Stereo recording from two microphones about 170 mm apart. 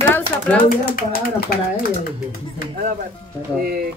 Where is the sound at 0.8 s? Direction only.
60° left (ahead or behind).